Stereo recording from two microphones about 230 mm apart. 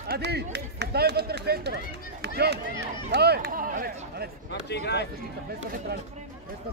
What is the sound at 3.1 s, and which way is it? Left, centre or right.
Speech, right.